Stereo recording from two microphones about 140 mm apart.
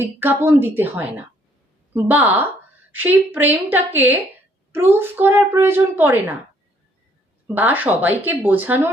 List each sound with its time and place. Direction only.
0.0 s speech: 15° right (ahead or behind)
7.4 s speech: 15° right (ahead or behind)